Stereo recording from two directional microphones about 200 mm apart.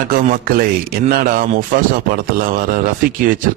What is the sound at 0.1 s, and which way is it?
A man's voice, 45° right (ahead or behind).